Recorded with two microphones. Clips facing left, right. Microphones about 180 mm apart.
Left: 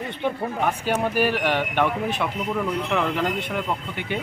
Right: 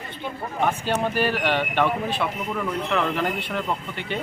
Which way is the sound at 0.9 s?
10° left (ahead or behind).